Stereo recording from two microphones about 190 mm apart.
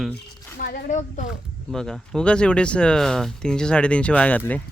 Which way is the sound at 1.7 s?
Centre (ahead or behind).